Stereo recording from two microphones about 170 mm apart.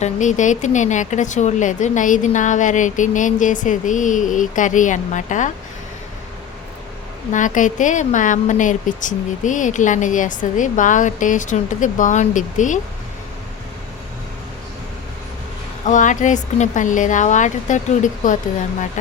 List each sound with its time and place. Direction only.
0.0 s speech: 45° left (ahead or behind)
7.3 s speech: 50° left (ahead or behind)
15.9 s speech: 45° left (ahead or behind)